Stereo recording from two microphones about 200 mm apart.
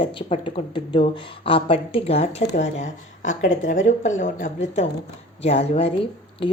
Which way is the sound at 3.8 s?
35° left (ahead or behind).